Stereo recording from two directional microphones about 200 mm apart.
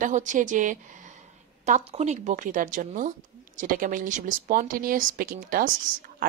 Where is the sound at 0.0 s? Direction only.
40° right (ahead or behind).